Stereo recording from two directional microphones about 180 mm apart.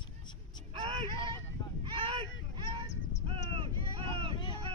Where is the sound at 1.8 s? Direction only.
30° right (ahead or behind).